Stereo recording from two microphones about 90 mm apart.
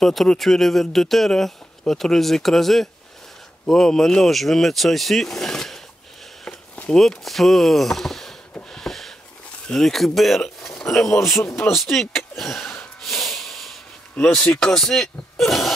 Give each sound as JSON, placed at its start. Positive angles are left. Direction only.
{"t": 0.0, "sound": "speech", "side_deg": 5}
{"t": 6.4, "sound": "a sound", "side_deg": 10}
{"t": 7.0, "sound": "speech", "side_deg": 0}
{"t": 8.5, "sound": "a sound", "side_deg": 5}
{"t": 9.7, "sound": "speech", "side_deg": 5}
{"t": 11.4, "sound": "speech", "side_deg": 30}
{"t": 11.7, "sound": "speech", "side_deg": 0}
{"t": 13.0, "sound": "hiss", "side_deg": 0}
{"t": 14.4, "sound": "speech", "side_deg": 10}